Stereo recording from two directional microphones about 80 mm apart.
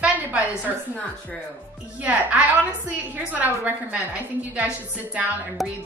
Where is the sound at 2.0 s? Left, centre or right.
Centre.